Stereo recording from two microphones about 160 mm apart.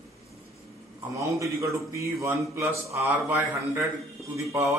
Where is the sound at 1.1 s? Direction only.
20° right (ahead or behind).